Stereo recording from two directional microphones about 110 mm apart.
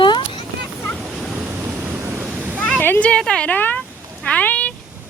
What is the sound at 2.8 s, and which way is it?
Speech, 15° left (ahead or behind).